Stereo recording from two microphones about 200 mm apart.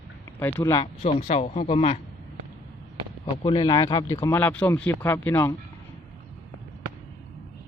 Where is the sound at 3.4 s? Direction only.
20° left (ahead or behind).